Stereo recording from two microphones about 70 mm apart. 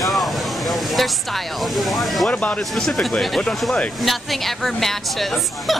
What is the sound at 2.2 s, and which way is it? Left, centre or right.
Speech, centre.